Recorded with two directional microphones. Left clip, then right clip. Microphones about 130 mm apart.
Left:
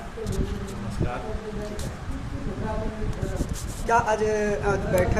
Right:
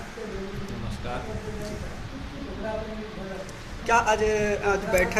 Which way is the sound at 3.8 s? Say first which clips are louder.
Even; centre (ahead or behind).